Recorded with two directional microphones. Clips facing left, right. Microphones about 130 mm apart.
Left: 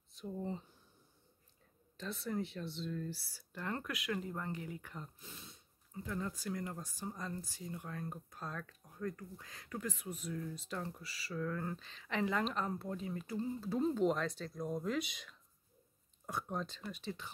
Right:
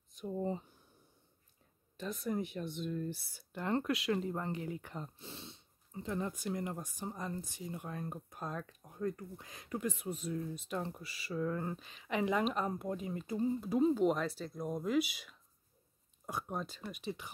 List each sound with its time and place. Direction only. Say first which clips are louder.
0.1 s speech: right 5 dB; 15° right (ahead or behind)
2.0 s speech: right 3 dB; 15° right (ahead or behind)
13.7 s speech: right 3 dB; 5° right (ahead or behind)